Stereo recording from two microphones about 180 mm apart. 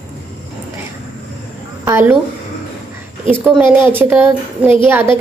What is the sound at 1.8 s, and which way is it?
Speech, 15° right (ahead or behind).